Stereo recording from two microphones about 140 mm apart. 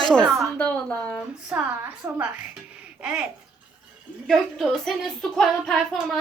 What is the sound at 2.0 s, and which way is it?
Speech, 20° right (ahead or behind).